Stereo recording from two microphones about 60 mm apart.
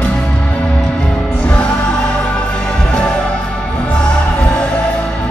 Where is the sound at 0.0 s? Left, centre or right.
Centre.